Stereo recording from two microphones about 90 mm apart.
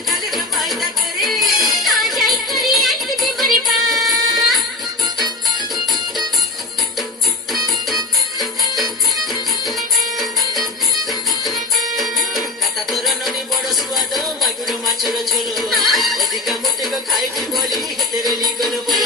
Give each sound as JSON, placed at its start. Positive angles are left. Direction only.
{"t": 0.1, "sound": "music", "side_deg": 0}
{"t": 11.4, "sound": "music", "side_deg": 0}